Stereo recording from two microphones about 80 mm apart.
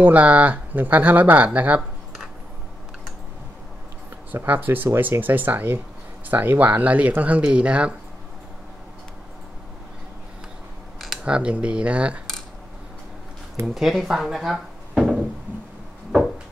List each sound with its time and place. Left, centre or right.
0.0 s speech: centre
4.3 s speech: right
11.2 s speech: centre
13.7 s speech: centre